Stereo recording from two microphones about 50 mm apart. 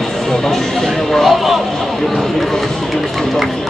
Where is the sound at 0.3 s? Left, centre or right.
Centre.